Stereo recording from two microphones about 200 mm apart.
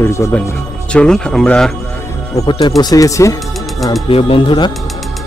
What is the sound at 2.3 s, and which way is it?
Speech, 20° left (ahead or behind).